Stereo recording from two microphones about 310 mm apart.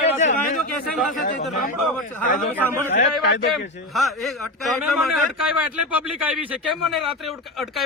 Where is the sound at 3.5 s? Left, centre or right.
Centre.